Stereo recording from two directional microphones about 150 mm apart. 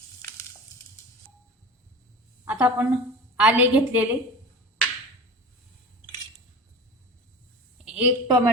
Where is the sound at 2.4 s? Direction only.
10° right (ahead or behind).